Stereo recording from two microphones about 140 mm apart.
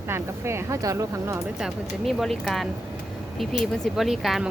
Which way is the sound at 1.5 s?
5° right (ahead or behind).